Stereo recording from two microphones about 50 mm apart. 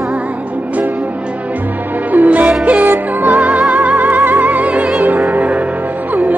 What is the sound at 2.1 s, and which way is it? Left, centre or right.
Music, right.